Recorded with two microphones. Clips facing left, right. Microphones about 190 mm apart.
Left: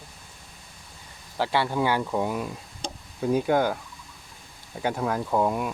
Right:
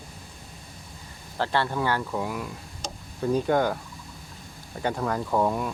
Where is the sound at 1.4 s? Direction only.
10° left (ahead or behind).